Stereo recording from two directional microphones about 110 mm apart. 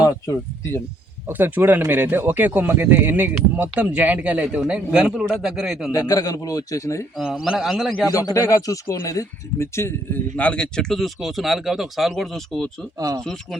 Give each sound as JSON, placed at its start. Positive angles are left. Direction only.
{"t": 0.0, "sound": "speech", "side_deg": 25}
{"t": 1.3, "sound": "speech", "side_deg": -15}
{"t": 5.9, "sound": "speech", "side_deg": 35}
{"t": 7.3, "sound": "speech", "side_deg": -5}
{"t": 8.1, "sound": "speech", "side_deg": 30}
{"t": 10.3, "sound": "speech", "side_deg": 10}
{"t": 13.0, "sound": "speech", "side_deg": -30}
{"t": 13.2, "sound": "speech", "side_deg": 5}